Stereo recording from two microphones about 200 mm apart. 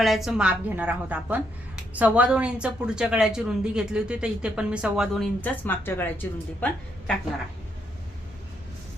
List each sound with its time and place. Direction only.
0.0 s a woman's voice: centre (ahead or behind)